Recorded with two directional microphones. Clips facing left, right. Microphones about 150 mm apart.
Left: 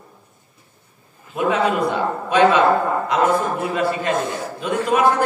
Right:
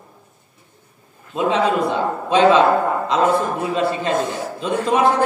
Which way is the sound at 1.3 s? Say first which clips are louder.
Right 1 dB; 25° right (ahead or behind).